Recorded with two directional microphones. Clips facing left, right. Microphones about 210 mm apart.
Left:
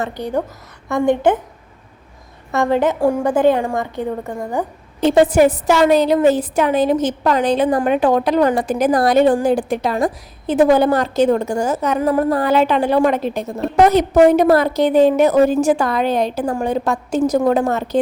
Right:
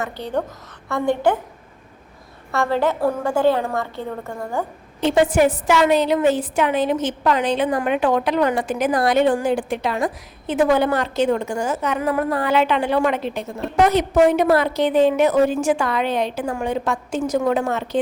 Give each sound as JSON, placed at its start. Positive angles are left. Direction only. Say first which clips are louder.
{"t": 0.2, "sound": "a woman's voice", "louder": "left 3 dB", "side_deg": 10}
{"t": 2.5, "sound": "a woman's voice", "louder": "left 4 dB", "side_deg": 20}
{"t": 4.9, "sound": "a woman's voice", "louder": "left 4 dB", "side_deg": 40}